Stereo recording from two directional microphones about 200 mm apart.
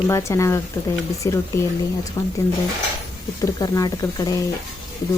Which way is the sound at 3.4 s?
15° left (ahead or behind).